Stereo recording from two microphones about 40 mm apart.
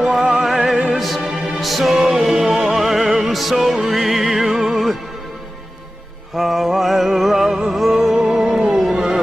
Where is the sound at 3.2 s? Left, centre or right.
Centre.